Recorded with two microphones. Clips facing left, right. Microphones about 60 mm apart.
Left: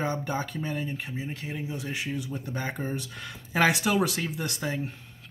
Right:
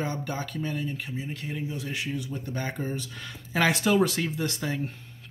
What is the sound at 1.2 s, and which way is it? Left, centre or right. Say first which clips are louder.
Speech: even; centre.